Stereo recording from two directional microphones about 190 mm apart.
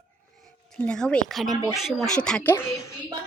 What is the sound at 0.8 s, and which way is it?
A woman's voice, 5° left (ahead or behind).